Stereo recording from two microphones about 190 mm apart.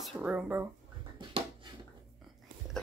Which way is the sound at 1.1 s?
25° right (ahead or behind).